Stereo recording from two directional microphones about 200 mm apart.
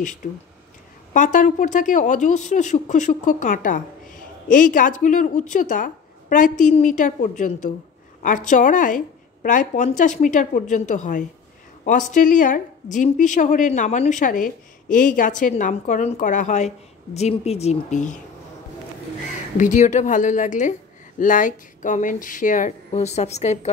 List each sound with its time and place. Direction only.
1.1 s a woman's voice: 40° left (ahead or behind)
19.5 s a woman's voice: 40° left (ahead or behind)